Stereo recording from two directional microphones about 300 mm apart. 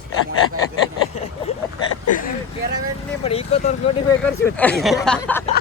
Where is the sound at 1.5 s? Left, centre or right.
Centre.